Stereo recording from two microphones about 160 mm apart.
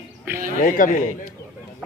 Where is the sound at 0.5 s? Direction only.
55° left (ahead or behind).